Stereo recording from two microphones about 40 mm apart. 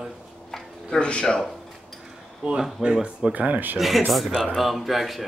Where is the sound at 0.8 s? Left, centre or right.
Left.